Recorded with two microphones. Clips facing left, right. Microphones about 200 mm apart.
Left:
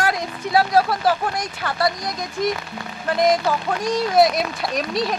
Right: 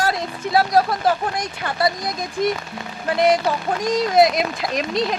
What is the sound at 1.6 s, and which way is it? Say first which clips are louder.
Speech: left 2 dB; 20° right (ahead or behind).